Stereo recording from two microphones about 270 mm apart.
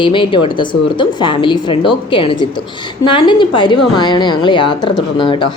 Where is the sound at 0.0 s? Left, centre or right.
Centre.